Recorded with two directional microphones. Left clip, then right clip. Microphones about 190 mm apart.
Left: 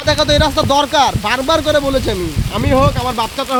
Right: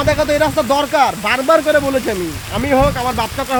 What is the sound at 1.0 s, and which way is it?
Speech, 15° left (ahead or behind).